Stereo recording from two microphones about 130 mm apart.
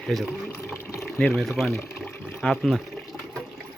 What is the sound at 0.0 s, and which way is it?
Speech, centre (ahead or behind).